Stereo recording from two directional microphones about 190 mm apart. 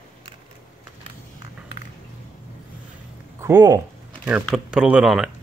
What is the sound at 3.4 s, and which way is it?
Speech, 15° right (ahead or behind).